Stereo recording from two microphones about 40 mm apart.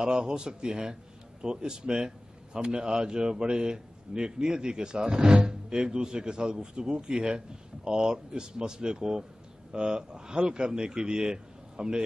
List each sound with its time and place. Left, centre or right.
0.0 s a man's voice: right